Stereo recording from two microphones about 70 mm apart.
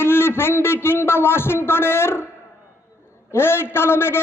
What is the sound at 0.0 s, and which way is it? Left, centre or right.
A man's voice, left.